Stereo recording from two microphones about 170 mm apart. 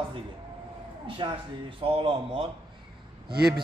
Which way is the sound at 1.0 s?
30° right (ahead or behind).